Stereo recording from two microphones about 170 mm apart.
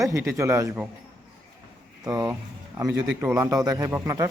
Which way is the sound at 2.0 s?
25° right (ahead or behind).